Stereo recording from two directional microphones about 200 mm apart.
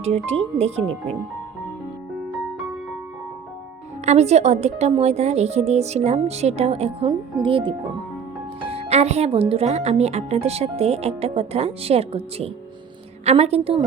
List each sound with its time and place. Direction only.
0.0 s speech: 30° right (ahead or behind)
4.0 s a woman's voice: 35° right (ahead or behind)